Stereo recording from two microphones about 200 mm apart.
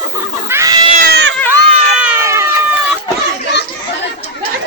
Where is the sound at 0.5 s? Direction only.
20° right (ahead or behind).